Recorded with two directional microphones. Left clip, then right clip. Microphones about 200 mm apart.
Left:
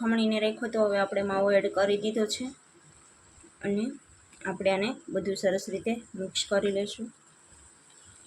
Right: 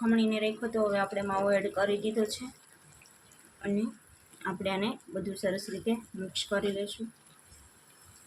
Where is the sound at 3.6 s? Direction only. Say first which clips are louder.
Left 3 dB; 15° left (ahead or behind).